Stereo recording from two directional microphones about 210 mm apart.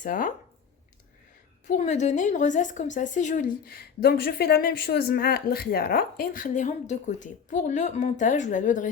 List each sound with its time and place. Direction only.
0.0 s speech: 40° left (ahead or behind)
1.6 s speech: 35° left (ahead or behind)